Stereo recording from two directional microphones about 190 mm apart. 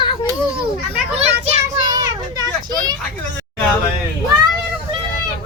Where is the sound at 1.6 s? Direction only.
20° right (ahead or behind).